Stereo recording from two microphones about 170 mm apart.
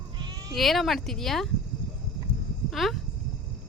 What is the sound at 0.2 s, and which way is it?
Bleat, 25° right (ahead or behind).